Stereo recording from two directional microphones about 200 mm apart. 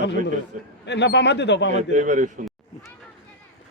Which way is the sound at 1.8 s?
40° right (ahead or behind).